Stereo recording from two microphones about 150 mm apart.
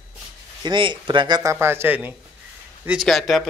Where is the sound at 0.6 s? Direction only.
30° right (ahead or behind); by 2.1 s 10° right (ahead or behind).